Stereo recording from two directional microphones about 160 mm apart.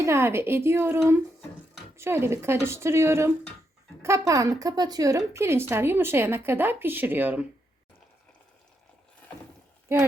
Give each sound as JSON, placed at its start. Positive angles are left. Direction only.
{"t": 0.0, "sound": "a woman's voice", "side_deg": -15}